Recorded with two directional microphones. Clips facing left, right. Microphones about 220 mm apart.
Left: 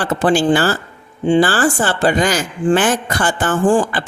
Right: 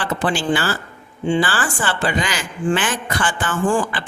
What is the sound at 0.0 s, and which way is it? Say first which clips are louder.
Speech: left 7 dB; 40° left (ahead or behind).